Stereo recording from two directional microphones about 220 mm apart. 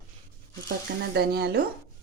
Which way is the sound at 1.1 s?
45° right (ahead or behind).